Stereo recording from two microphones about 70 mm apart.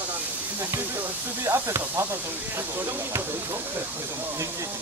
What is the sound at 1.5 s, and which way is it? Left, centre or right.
Speech, right.